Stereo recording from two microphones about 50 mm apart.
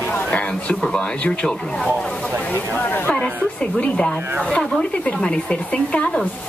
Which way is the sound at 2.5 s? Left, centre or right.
Left.